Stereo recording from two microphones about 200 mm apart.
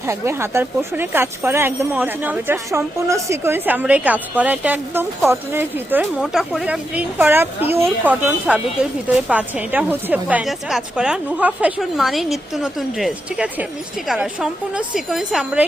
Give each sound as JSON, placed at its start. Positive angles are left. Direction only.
{"t": 0.1, "sound": "a woman's voice", "side_deg": -15}